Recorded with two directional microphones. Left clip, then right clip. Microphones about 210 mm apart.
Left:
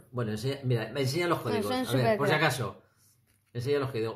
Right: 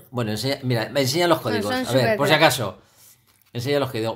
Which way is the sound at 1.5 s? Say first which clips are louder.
Right 6 dB; centre (ahead or behind).